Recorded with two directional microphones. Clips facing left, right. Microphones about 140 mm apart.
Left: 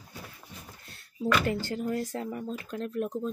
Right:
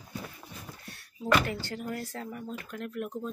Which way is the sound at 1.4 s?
25° left (ahead or behind).